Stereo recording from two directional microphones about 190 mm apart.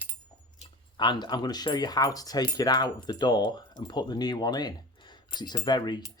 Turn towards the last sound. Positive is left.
turn(degrees=20)  # may be behind; listen again after turning